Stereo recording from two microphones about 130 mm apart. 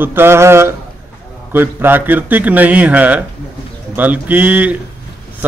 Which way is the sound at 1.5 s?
15° right (ahead or behind).